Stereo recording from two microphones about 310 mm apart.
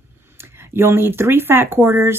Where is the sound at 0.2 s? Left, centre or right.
Centre.